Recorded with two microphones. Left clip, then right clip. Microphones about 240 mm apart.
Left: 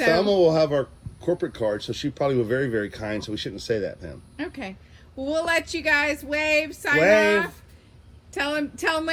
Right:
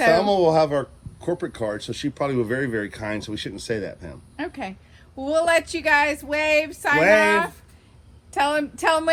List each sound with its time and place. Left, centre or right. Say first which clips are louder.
0.2 s speech: right 1 dB; right
4.4 s a sound: right 3 dB; centre
5.2 s speech: right 4 dB; centre
7.0 s speech: right 1 dB; right
8.3 s speech: right 5 dB; centre